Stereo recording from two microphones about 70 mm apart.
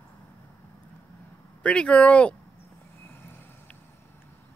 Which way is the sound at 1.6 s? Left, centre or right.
Centre.